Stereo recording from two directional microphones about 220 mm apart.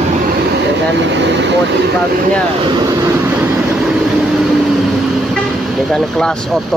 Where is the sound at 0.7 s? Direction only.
55° right (ahead or behind).